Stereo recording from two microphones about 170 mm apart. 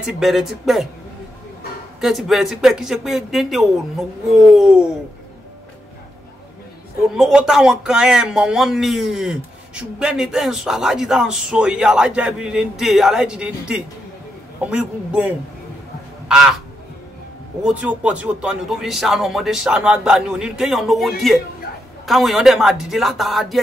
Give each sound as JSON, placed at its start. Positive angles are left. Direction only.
{"t": 0.0, "sound": "a man's voice", "side_deg": 0}
{"t": 2.0, "sound": "a man's voice", "side_deg": 0}
{"t": 7.2, "sound": "a man's voice", "side_deg": -5}
{"t": 16.3, "sound": "crow", "side_deg": -5}
{"t": 17.6, "sound": "a man's voice", "side_deg": -10}